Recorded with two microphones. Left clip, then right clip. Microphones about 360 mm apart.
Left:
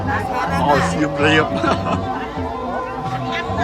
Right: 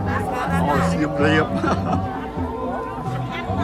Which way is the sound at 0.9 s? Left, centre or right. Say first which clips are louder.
Left 3 dB; centre.